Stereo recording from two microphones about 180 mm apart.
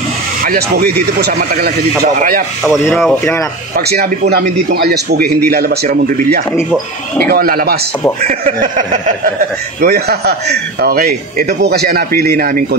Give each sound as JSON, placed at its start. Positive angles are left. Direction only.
{"t": 0.4, "sound": "speech", "side_deg": -55}
{"t": 3.0, "sound": "speech", "side_deg": 5}
{"t": 3.7, "sound": "speech", "side_deg": -60}
{"t": 6.5, "sound": "speech", "side_deg": 10}
{"t": 7.2, "sound": "speech", "side_deg": -55}
{"t": 9.8, "sound": "speech", "side_deg": -60}